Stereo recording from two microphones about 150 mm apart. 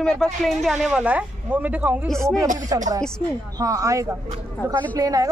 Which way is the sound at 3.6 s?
20° right (ahead or behind).